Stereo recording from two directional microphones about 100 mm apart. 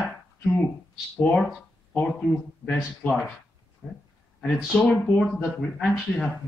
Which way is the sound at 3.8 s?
Centre (ahead or behind).